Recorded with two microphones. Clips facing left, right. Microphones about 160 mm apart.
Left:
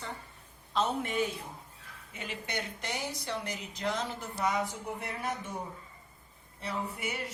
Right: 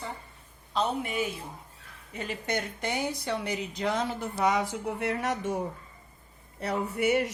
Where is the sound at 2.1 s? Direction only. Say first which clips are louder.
Right 6 dB; 40° right (ahead or behind); by 5.6 s 75° right (ahead or behind).